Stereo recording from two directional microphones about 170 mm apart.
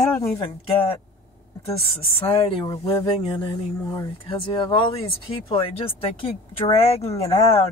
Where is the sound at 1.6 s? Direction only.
35° left (ahead or behind).